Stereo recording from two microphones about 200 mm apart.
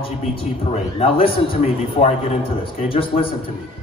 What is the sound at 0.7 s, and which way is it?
Speech, 30° left (ahead or behind).